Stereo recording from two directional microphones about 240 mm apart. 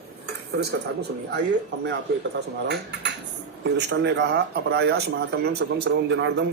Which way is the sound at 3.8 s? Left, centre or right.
Right.